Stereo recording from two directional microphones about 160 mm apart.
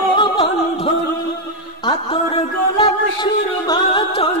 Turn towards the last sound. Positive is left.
turn(degrees=35)  # may be behind; listen again after turning